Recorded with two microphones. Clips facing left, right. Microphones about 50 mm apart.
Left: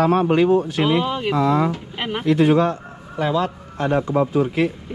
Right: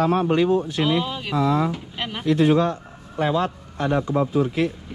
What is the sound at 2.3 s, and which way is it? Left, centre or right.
Speech, left.